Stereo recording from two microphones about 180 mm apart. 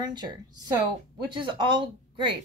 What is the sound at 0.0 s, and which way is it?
Speech, 25° right (ahead or behind).